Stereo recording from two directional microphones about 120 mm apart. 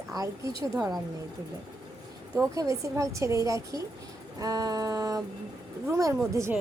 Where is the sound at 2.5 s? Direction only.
25° right (ahead or behind).